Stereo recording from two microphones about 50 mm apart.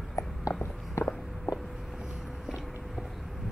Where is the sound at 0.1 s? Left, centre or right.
Left.